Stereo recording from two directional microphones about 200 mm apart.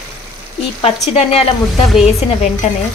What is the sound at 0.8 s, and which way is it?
Speech, 30° left (ahead or behind).